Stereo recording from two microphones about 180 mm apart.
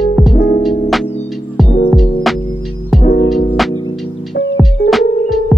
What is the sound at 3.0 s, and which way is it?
Music, 55° left (ahead or behind).